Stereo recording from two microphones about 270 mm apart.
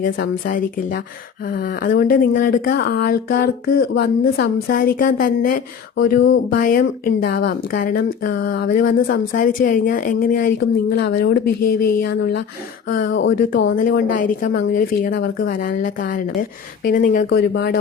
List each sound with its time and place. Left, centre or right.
0.0 s speech: left
6.5 s speech: left